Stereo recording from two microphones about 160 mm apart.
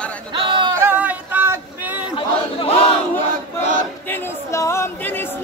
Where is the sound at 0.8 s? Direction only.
10° right (ahead or behind).